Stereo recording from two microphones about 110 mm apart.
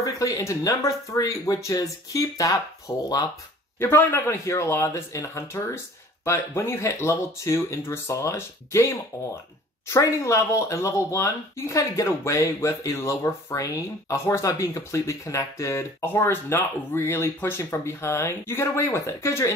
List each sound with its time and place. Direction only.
0.0 s speech: 30° left (ahead or behind)
3.8 s speech: 20° left (ahead or behind)